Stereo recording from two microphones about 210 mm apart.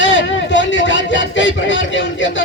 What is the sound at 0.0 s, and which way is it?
Speech, 65° left (ahead or behind).